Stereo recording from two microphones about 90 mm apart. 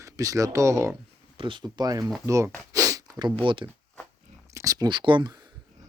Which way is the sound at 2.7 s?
40° right (ahead or behind).